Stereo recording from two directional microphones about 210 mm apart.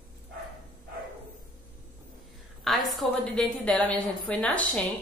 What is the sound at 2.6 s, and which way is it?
A woman's voice, centre (ahead or behind).